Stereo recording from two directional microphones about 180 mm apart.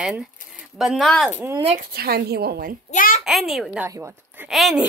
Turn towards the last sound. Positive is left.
turn(degrees=0)  # may be behind; listen again after turning